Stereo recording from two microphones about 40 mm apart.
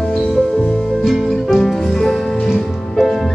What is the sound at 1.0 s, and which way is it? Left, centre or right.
Music, centre.